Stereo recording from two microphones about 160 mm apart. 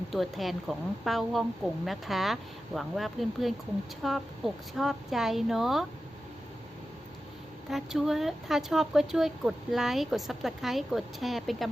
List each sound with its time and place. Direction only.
0.1 s speech: centre (ahead or behind)
7.7 s speech: centre (ahead or behind)